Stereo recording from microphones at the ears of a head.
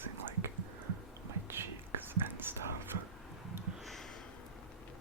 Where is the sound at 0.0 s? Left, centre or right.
Right.